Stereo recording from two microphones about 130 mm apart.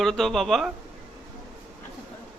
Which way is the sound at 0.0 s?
Centre (ahead or behind).